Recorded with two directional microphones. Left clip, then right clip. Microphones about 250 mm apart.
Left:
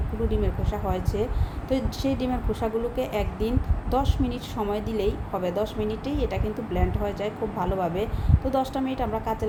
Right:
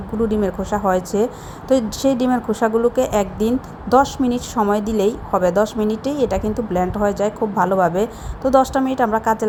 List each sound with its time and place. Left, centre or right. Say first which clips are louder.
0.3 s a woman's voice: right 8 dB; right